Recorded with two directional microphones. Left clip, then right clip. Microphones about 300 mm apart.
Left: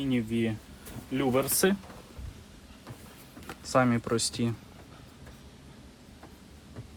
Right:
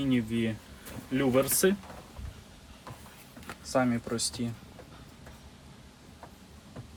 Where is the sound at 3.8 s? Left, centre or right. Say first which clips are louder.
Left 4 dB; left.